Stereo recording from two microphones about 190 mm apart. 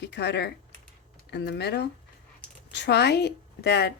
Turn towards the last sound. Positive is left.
turn(degrees=60)  # may be behind; listen again after turning